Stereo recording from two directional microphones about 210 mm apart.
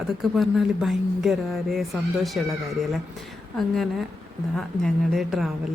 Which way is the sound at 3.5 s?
Centre (ahead or behind).